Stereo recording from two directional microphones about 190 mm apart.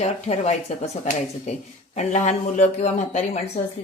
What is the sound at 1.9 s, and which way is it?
Speech, 40° left (ahead or behind).